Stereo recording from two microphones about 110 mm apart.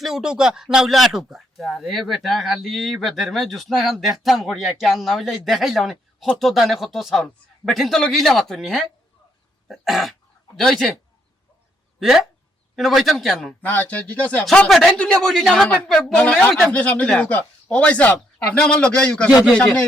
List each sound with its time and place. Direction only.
0.0 s speech: 5° right (ahead or behind)
11.9 s speech: 5° right (ahead or behind)
13.6 s speech: 15° left (ahead or behind)
15.6 s speech: 15° left (ahead or behind)